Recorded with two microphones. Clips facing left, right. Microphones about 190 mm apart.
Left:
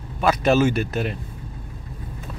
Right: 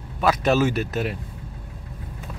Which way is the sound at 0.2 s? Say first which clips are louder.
Left 2 dB; centre (ahead or behind).